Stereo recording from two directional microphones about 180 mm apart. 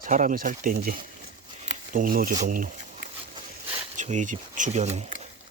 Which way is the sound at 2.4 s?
50° right (ahead or behind).